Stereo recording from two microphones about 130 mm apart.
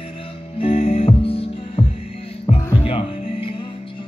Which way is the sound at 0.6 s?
50° left (ahead or behind).